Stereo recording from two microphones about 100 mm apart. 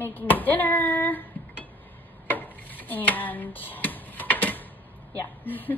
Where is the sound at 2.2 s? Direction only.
15° left (ahead or behind).